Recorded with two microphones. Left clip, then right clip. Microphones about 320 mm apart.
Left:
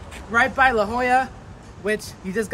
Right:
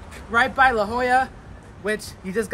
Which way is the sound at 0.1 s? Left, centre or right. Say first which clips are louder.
Left 1 dB; centre.